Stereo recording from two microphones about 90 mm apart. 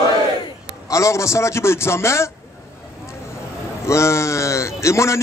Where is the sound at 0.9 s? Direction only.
35° left (ahead or behind).